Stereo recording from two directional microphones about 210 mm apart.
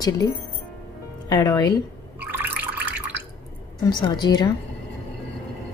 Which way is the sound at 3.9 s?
20° left (ahead or behind).